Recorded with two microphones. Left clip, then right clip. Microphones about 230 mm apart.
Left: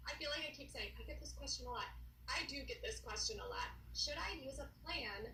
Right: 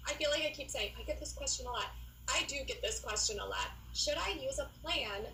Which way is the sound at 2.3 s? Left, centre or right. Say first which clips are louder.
Right 8 dB; right.